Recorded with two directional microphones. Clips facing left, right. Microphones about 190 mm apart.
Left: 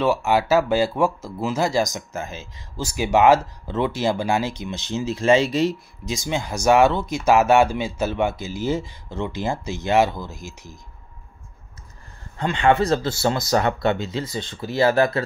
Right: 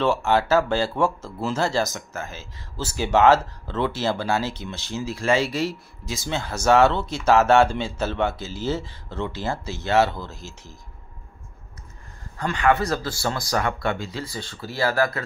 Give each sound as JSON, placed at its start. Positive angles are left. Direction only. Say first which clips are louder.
{"t": 0.0, "sound": "speech", "louder": "left 1 dB", "side_deg": 10}
{"t": 12.4, "sound": "speech", "louder": "left 3 dB", "side_deg": 25}